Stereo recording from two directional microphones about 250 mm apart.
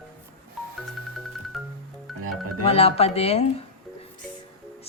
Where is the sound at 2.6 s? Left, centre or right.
Left.